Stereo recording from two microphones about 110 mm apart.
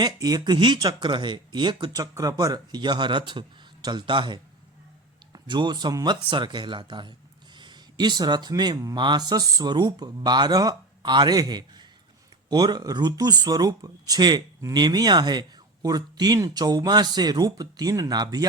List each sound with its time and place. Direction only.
0.0 s speech: 40° right (ahead or behind)